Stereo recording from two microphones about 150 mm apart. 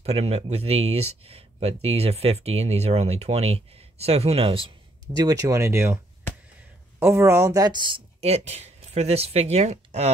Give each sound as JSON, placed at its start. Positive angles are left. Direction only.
{"t": 0.0, "sound": "speech", "side_deg": -45}
{"t": 5.1, "sound": "speech", "side_deg": -25}
{"t": 7.0, "sound": "speech", "side_deg": -15}